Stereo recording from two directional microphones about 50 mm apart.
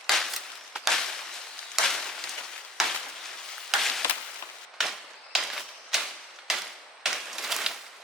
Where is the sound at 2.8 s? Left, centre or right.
Centre.